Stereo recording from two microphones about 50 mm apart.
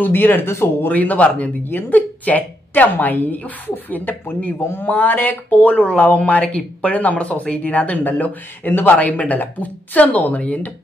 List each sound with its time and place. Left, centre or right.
0.0 s speech: left
0.8 s a woman's voice: left